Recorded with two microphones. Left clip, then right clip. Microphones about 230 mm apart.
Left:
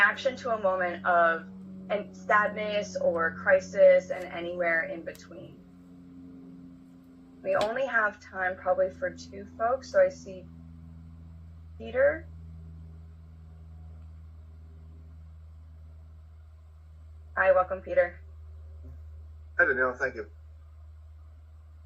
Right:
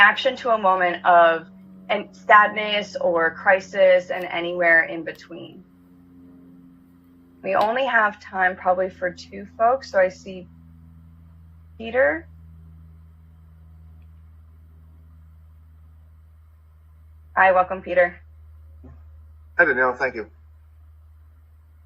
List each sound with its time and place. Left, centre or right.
0.0 s a woman's voice: right
7.4 s a woman's voice: right
11.9 s a woman's voice: right
17.3 s a woman's voice: right
19.5 s a woman's voice: right